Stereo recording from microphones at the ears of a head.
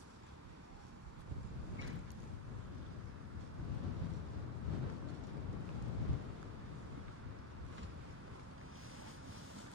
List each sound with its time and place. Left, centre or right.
3.5 s thunder: left